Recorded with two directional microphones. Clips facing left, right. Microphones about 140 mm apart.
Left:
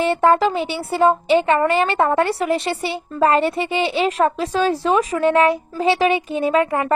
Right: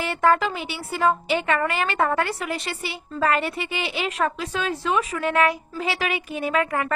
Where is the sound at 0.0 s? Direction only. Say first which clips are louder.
Left 5 dB; 25° left (ahead or behind).